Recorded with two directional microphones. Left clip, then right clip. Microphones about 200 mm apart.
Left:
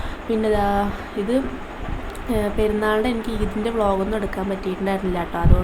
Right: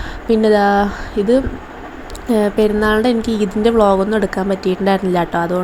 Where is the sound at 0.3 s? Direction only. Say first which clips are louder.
Right 8 dB; 35° right (ahead or behind).